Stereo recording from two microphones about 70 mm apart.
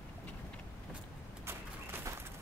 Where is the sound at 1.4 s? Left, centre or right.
Right.